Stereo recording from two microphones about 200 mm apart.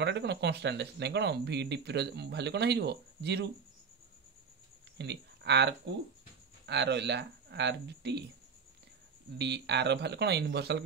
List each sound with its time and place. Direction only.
0.0 s speech: 60° right (ahead or behind)
4.9 s speech: 60° right (ahead or behind)
9.4 s speech: 60° right (ahead or behind)